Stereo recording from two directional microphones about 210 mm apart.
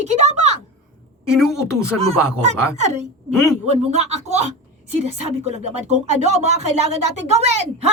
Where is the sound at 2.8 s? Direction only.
35° right (ahead or behind).